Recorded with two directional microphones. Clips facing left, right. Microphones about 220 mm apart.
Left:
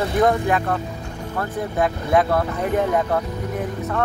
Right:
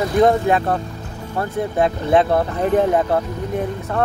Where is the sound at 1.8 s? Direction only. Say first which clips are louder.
Right 3 dB; 25° right (ahead or behind).